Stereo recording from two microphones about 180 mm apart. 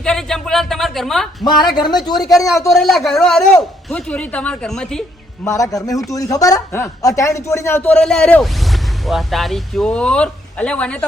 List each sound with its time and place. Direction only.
0.0 s speech: 5° left (ahead or behind)
1.5 s speech: 25° left (ahead or behind)
2.7 s speech: centre (ahead or behind)
5.5 s speech: 20° left (ahead or behind)